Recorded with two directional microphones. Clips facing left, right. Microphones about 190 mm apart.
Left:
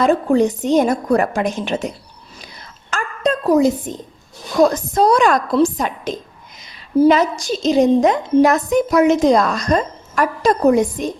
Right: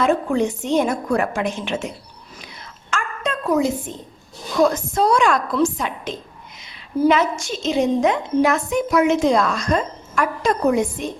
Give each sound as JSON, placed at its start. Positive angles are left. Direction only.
{"t": 0.0, "sound": "a woman's voice", "side_deg": 35}
{"t": 2.9, "sound": "a sound", "side_deg": 35}
{"t": 4.6, "sound": "a woman's voice", "side_deg": 40}